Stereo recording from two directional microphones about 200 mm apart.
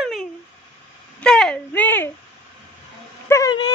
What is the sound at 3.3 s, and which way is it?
Speech, 20° left (ahead or behind).